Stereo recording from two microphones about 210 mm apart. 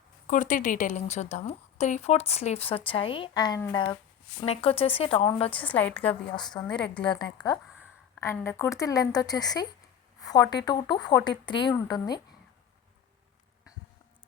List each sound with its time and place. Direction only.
0.3 s a woman's voice: 40° left (ahead or behind)
5.5 s a woman's voice: 5° left (ahead or behind)
6.0 s a woman's voice: 25° left (ahead or behind)